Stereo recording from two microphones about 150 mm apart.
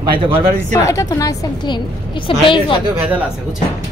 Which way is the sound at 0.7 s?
20° left (ahead or behind).